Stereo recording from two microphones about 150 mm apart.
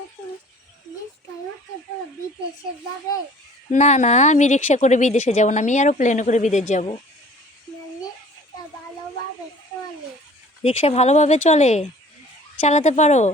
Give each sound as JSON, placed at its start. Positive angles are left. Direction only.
{"t": 3.7, "sound": "a woman's voice", "side_deg": 50}
{"t": 10.6, "sound": "a woman's voice", "side_deg": 40}